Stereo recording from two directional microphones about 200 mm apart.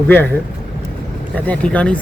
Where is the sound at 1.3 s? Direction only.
5° left (ahead or behind).